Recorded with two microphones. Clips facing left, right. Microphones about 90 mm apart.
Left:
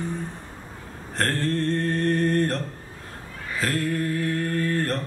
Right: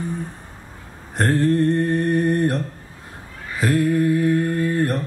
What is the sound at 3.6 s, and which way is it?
Mantra, 15° right (ahead or behind).